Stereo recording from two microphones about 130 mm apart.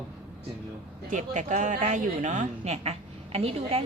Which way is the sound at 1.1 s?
65° right (ahead or behind).